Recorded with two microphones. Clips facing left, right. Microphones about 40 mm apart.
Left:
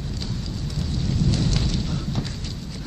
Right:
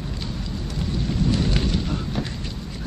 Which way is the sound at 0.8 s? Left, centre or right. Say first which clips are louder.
Right 1 dB; right.